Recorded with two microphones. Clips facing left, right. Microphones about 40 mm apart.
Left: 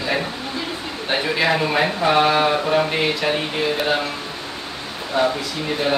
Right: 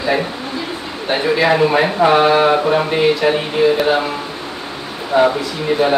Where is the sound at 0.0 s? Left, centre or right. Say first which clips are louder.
Right 5 dB; centre.